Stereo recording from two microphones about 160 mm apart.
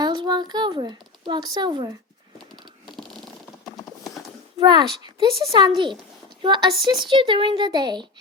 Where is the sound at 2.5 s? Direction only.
30° right (ahead or behind).